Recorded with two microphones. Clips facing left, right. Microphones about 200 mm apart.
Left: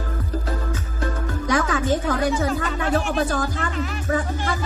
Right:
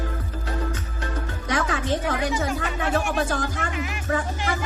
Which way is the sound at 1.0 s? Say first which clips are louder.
Left 6 dB; 40° left (ahead or behind).